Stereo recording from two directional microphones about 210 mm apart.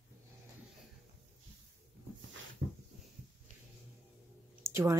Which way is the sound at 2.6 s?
55° right (ahead or behind).